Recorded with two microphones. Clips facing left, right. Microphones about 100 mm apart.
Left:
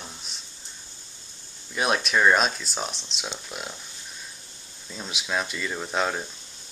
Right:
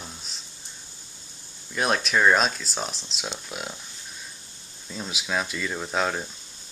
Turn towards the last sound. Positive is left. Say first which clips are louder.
# even
turn(degrees=0)  # may be behind; listen again after turning